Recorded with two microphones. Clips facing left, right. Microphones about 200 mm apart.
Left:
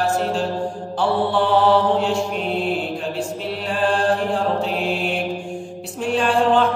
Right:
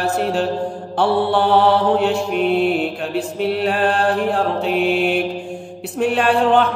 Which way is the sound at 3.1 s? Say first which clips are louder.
Right 6 dB; 65° right (ahead or behind).